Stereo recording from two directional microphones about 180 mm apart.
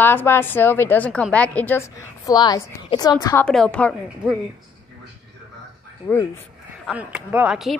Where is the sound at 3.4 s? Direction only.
5° left (ahead or behind).